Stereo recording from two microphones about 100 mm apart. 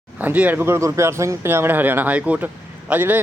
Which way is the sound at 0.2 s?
15° right (ahead or behind).